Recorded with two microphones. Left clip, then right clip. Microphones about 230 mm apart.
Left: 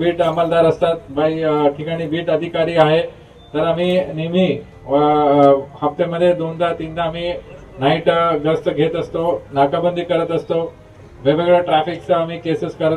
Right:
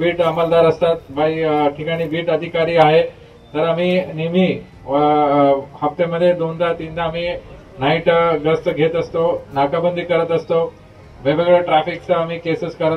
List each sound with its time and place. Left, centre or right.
0.0 s speech: left